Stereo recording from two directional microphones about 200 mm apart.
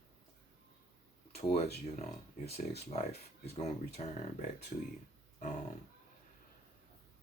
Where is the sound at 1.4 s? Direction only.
35° left (ahead or behind).